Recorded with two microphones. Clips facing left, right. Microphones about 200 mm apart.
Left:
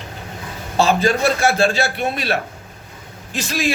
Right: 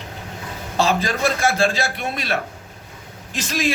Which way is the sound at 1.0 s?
30° left (ahead or behind).